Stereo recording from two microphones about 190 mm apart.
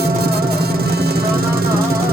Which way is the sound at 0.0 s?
55° right (ahead or behind).